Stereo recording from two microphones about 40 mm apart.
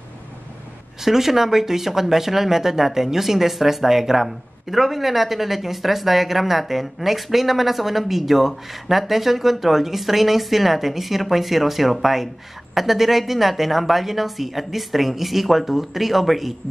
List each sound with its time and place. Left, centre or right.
1.0 s speech: centre